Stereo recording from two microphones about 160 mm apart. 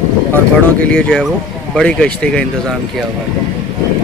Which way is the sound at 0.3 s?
10° left (ahead or behind).